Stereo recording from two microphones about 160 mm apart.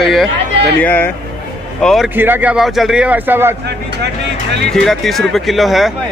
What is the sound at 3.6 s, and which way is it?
Speech, 90° right.